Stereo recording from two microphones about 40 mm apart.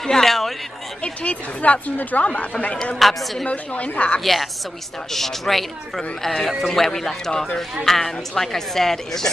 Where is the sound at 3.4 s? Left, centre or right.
Left.